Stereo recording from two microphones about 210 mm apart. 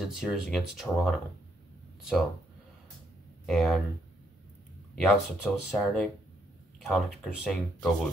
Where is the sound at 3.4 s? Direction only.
Centre (ahead or behind).